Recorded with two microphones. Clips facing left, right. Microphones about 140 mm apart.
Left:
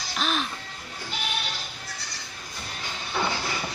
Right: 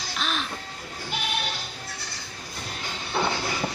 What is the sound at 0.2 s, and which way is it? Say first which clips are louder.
Music: left 3 dB; centre (ahead or behind).